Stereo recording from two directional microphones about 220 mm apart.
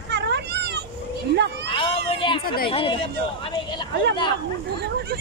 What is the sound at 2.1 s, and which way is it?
Speech, 25° left (ahead or behind).